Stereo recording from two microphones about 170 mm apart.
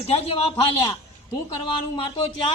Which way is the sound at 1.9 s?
25° left (ahead or behind).